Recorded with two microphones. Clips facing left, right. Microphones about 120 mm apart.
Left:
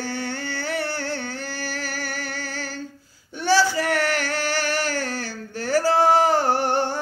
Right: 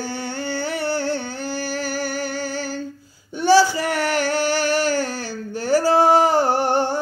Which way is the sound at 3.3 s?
10° right (ahead or behind).